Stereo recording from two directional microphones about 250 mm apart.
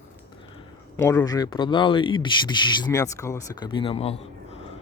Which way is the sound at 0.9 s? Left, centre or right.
Centre.